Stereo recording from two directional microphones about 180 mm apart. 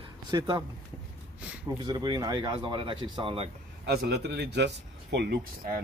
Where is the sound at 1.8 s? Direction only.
20° right (ahead or behind).